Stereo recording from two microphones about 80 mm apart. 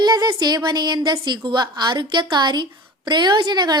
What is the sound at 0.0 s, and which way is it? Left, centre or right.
A woman's voice, right.